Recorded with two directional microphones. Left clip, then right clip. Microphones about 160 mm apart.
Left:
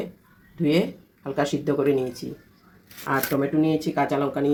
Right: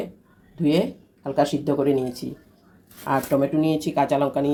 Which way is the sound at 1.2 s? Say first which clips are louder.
Right 3 dB; centre (ahead or behind).